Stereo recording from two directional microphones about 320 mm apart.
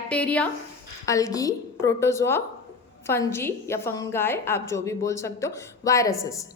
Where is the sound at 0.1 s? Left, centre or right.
Centre.